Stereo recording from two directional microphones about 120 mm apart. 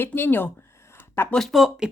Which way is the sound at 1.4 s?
Centre (ahead or behind).